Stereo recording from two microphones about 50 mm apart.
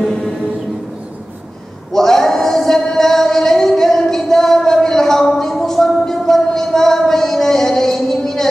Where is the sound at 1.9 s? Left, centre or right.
Centre.